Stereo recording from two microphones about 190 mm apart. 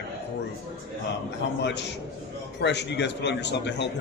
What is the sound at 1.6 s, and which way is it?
A man's voice, 65° left (ahead or behind).